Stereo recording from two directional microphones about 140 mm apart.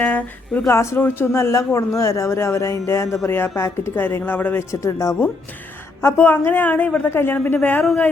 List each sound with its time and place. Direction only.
0.0 s a woman's voice: 10° left (ahead or behind)